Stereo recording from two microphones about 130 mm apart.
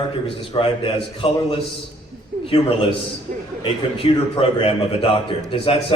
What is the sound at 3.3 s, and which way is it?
Speech, 80° right.